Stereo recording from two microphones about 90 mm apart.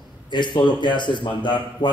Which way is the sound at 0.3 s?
60° left (ahead or behind).